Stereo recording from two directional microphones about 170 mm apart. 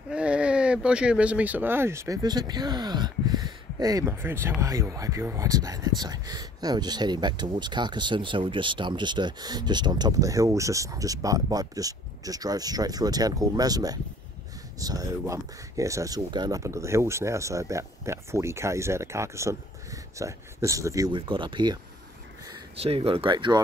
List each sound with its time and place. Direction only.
0.1 s speech: 5° right (ahead or behind); by 21.7 s 30° right (ahead or behind)
22.8 s speech: 35° right (ahead or behind)